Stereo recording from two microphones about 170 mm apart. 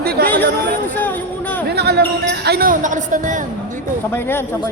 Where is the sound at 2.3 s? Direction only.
75° right (ahead or behind); by 3.4 s 50° right (ahead or behind).